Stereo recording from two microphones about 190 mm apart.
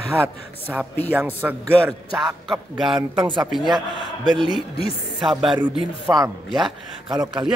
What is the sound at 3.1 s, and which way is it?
Speech, 25° right (ahead or behind).